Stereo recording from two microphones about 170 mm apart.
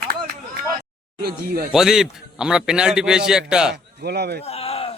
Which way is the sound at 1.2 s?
65° right (ahead or behind).